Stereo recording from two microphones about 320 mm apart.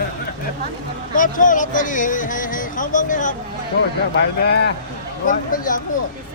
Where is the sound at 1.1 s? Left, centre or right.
Left.